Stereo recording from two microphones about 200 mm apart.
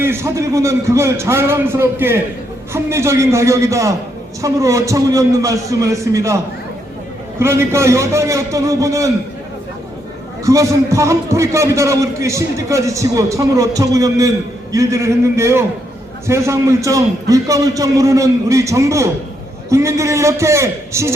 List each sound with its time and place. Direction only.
0.0 s a man's voice: 10° right (ahead or behind)
10.4 s a man's voice: 15° right (ahead or behind)